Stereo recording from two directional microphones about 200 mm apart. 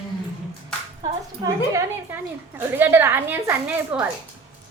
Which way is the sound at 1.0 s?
15° right (ahead or behind).